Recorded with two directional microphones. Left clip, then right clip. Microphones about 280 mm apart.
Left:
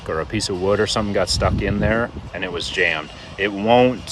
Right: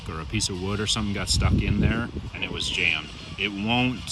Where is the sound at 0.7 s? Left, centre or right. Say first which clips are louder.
Left 12 dB; left.